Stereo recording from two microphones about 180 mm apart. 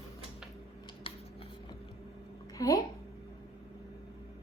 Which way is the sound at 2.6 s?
20° left (ahead or behind).